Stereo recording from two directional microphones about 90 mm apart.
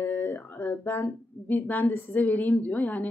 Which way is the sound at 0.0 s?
25° left (ahead or behind).